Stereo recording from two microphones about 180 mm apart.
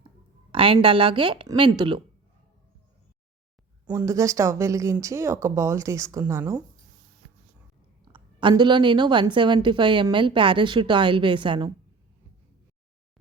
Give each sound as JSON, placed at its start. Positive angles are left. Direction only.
{"t": 0.5, "sound": "a woman's voice", "side_deg": -30}
{"t": 3.8, "sound": "speech", "side_deg": -15}
{"t": 8.0, "sound": "a woman's voice", "side_deg": -25}